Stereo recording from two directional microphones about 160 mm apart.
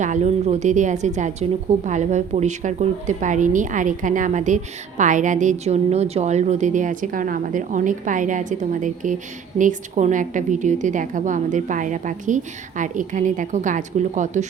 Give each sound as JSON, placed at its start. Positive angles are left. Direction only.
{"t": 0.0, "sound": "a woman's voice", "side_deg": -50}